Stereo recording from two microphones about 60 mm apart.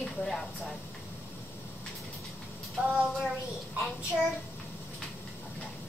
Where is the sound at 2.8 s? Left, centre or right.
Right.